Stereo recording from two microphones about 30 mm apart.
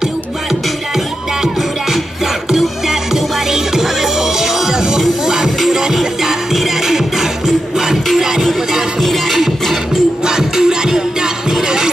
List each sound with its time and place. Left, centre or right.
3.5 s music: centre
9.3 s music: centre
10.2 s music: right